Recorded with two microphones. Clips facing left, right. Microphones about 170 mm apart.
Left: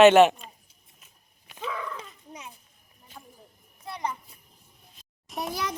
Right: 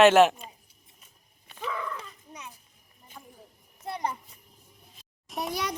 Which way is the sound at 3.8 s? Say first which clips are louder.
Right 1 dB; 45° right (ahead or behind).